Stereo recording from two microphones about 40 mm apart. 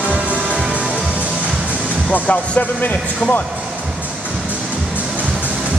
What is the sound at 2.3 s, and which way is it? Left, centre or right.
Speech, left.